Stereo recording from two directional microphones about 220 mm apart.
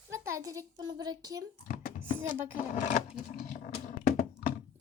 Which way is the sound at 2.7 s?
35° left (ahead or behind).